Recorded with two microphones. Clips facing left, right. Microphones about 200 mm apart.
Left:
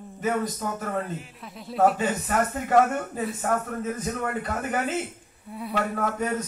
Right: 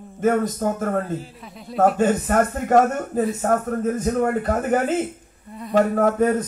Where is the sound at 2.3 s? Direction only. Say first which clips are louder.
Right 6 dB; 50° right (ahead or behind).